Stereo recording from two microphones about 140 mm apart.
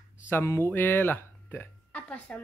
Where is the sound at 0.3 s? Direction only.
15° left (ahead or behind).